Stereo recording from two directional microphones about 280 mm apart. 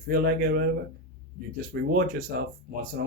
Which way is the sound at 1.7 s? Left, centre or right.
Right.